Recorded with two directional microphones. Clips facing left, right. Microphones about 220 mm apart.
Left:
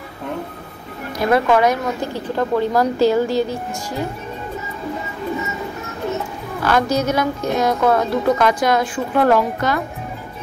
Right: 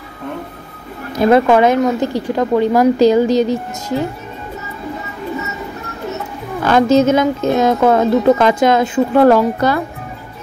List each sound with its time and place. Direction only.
1.2 s speech: 25° right (ahead or behind)
6.6 s a woman's voice: 25° right (ahead or behind)
9.3 s speech: 35° right (ahead or behind)